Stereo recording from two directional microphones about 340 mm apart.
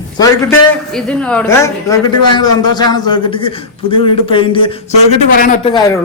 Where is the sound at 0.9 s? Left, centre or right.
Centre; by 5.8 s left.